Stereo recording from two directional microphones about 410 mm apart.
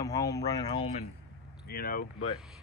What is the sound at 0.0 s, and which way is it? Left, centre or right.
Speech, centre.